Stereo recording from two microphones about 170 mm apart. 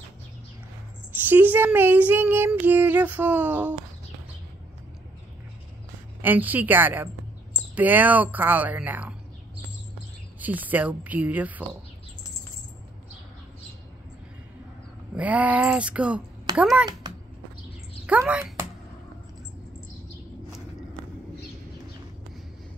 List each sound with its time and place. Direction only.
1.1 s speech: 10° right (ahead or behind)
6.2 s speech: 10° right (ahead or behind)
10.4 s speech: 10° right (ahead or behind)
15.1 s speech: 10° right (ahead or behind)
17.0 s cat: 25° right (ahead or behind)
18.0 s speech: 10° right (ahead or behind)